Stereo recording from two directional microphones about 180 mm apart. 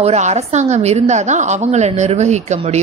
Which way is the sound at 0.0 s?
40° right (ahead or behind).